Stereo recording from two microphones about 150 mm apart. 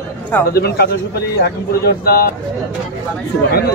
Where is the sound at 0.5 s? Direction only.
90° left.